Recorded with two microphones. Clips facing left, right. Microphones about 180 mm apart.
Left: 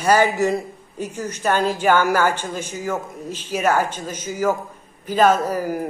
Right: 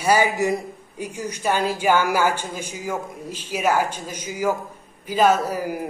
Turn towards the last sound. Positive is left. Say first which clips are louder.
# left 2 dB
turn(degrees=-10)  # may be behind; listen again after turning